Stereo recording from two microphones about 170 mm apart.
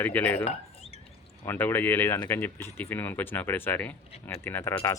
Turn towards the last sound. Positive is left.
turn(degrees=15)  # may be behind; listen again after turning